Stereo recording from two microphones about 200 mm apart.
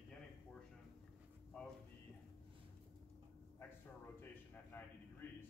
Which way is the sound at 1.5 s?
5° left (ahead or behind).